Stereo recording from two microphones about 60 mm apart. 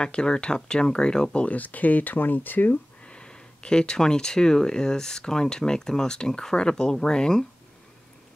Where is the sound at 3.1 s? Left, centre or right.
Centre.